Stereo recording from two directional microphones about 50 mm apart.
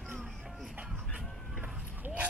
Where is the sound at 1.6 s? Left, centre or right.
Right.